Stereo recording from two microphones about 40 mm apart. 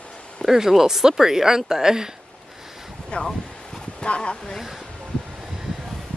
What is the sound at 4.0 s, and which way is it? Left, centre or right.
Dog, left.